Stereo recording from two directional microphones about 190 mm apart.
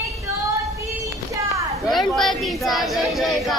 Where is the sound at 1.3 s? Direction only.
15° right (ahead or behind).